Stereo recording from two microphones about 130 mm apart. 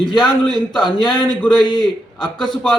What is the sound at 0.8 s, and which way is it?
Speech, 35° left (ahead or behind).